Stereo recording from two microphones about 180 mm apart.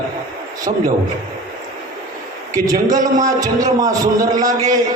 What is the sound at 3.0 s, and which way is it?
Speech, 45° right (ahead or behind).